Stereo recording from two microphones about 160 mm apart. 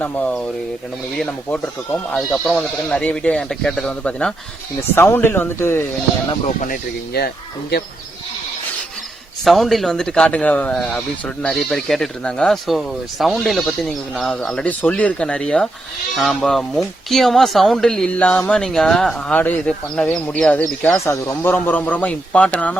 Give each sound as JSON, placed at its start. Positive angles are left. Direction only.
{"t": 0.0, "sound": "speech", "side_deg": 10}
{"t": 6.6, "sound": "speech", "side_deg": 65}
{"t": 9.4, "sound": "speech", "side_deg": 0}